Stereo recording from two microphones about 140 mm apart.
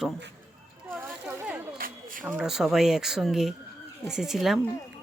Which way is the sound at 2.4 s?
5° right (ahead or behind).